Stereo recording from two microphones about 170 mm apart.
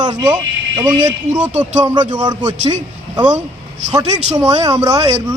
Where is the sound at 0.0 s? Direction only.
25° right (ahead or behind).